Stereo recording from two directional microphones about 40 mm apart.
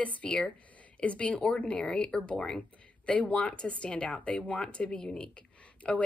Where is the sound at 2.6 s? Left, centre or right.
Left.